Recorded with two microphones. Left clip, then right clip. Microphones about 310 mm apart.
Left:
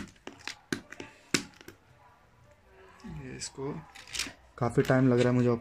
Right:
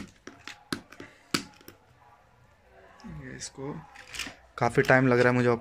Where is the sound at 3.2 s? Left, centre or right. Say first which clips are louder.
Left 1 dB; centre.